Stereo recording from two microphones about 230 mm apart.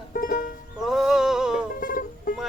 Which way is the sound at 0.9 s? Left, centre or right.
Centre.